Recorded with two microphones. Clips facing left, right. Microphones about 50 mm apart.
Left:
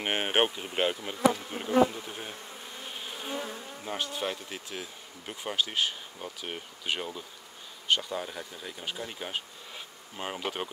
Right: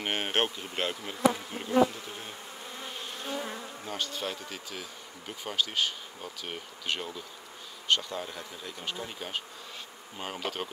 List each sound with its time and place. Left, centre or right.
0.0 s bee: centre
4.5 s speech: centre
5.2 s bee: centre